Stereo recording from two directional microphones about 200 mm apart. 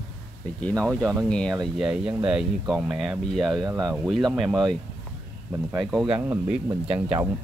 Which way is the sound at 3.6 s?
20° right (ahead or behind).